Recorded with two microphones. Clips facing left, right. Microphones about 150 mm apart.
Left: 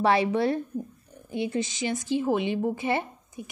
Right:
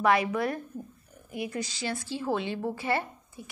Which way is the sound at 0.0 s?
30° left (ahead or behind).